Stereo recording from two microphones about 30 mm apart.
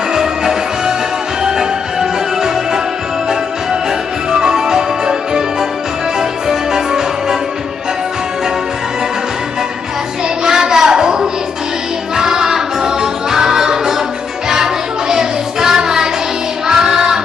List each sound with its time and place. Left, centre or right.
0.1 s music: centre
4.3 s music: right
10.4 s a sound: centre
12.1 s music: centre
15.1 s child singing: centre
16.6 s music: centre